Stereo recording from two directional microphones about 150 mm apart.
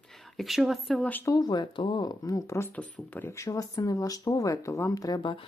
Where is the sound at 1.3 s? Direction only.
25° left (ahead or behind).